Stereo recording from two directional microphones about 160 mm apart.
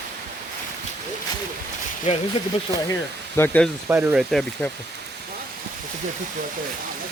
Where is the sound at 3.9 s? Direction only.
10° right (ahead or behind).